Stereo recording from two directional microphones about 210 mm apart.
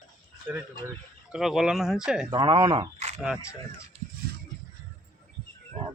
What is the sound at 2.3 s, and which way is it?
Speech, 20° right (ahead or behind).